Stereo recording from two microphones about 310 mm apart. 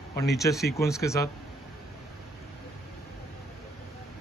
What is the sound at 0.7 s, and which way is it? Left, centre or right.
Speech, centre.